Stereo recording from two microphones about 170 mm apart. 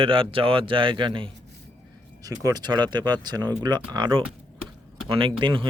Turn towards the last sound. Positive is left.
turn(degrees=-30)  # may be behind; listen again after turning